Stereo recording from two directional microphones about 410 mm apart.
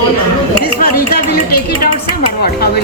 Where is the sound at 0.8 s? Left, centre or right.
Left.